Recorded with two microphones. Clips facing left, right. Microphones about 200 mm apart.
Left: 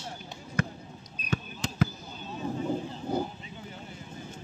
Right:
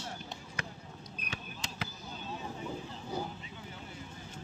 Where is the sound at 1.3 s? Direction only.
45° left (ahead or behind).